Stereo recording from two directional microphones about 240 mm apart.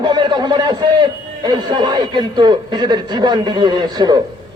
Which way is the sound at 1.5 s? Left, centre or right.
Centre.